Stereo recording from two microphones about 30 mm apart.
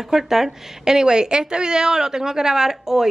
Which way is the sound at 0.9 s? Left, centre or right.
Right.